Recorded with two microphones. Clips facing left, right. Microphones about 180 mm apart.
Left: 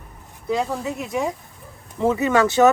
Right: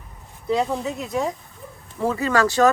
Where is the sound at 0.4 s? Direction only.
Centre (ahead or behind).